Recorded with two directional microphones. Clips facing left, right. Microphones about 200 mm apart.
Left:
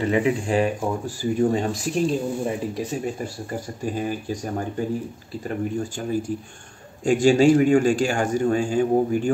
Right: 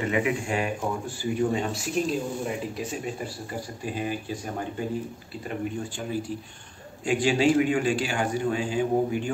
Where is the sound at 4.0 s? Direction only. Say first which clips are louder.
Left 3 dB; 45° left (ahead or behind).